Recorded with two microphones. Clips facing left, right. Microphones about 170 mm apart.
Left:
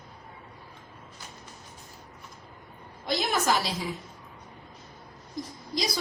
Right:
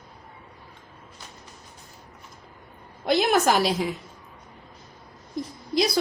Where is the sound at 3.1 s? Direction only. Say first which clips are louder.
Right 6 dB; 60° right (ahead or behind).